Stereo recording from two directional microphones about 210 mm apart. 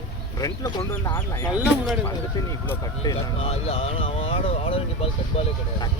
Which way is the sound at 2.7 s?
20° left (ahead or behind).